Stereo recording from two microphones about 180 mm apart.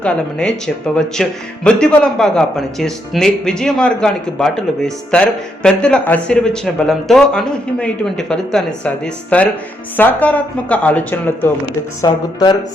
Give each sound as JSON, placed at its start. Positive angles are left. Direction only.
{"t": 0.0, "sound": "a man's voice", "side_deg": 5}
{"t": 12.0, "sound": "speech", "side_deg": 20}